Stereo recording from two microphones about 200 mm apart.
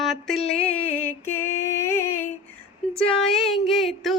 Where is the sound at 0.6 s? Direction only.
10° left (ahead or behind).